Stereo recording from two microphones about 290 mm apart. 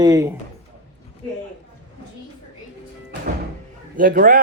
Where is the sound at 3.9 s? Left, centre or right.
Right.